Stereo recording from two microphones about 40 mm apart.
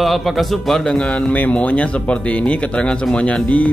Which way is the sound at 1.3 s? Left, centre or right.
Left.